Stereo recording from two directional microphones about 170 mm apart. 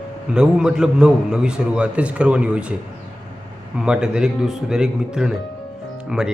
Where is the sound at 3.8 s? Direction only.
5° right (ahead or behind).